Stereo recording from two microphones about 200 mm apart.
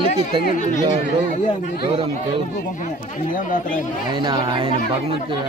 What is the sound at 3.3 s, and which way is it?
Speech, 45° left (ahead or behind).